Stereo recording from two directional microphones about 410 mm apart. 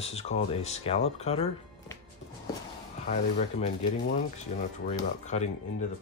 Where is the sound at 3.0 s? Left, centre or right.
Centre.